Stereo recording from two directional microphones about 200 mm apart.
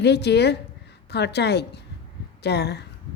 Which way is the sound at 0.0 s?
55° left (ahead or behind).